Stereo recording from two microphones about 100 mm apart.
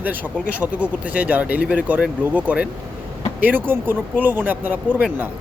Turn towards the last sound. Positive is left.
turn(degrees=-15)  # may be behind; listen again after turning